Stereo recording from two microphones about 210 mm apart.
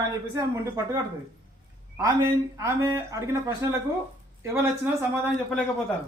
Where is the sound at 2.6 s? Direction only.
15° right (ahead or behind).